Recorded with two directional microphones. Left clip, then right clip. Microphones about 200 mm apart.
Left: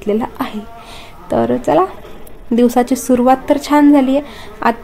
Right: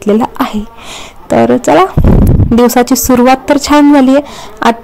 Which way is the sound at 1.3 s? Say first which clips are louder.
Right 6 dB; 45° right (ahead or behind).